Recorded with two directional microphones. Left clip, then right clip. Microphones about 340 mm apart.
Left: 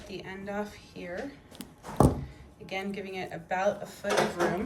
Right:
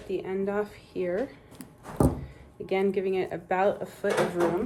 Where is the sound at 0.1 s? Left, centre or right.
Centre.